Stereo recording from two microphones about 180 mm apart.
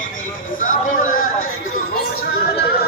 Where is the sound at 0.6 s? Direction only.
50° left (ahead or behind).